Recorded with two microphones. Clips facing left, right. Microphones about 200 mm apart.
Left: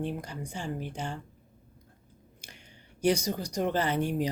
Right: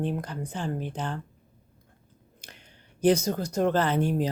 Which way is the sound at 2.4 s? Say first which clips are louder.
Right 2 dB; 10° left (ahead or behind).